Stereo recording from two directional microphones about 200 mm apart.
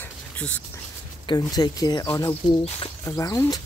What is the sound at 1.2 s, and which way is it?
Speech, 20° left (ahead or behind).